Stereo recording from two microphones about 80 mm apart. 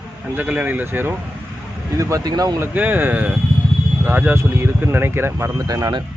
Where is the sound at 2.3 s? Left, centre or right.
Right.